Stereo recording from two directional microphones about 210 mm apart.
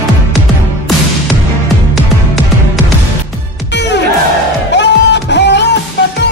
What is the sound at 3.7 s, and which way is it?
Music, 55° left (ahead or behind).